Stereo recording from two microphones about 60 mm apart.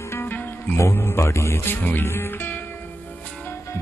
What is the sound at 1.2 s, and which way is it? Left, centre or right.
Speech, left.